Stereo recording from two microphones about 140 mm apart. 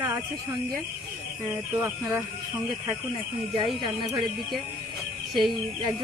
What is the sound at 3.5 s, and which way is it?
Speech, 35° right (ahead or behind).